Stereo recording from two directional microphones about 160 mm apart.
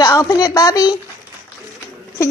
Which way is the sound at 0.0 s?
25° left (ahead or behind).